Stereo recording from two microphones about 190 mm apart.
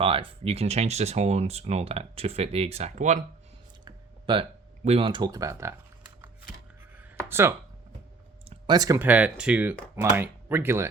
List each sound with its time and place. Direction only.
0.0 s speech: 30° right (ahead or behind)
3.8 s a sound: 25° right (ahead or behind)
4.9 s speech: 30° right (ahead or behind)
7.3 s speech: 10° right (ahead or behind)
8.4 s speech: 25° right (ahead or behind)